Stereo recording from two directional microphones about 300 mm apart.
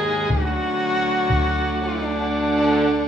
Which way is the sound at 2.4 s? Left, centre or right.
Centre.